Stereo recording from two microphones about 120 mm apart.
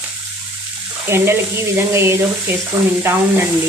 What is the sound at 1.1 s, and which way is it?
Speech, 20° right (ahead or behind).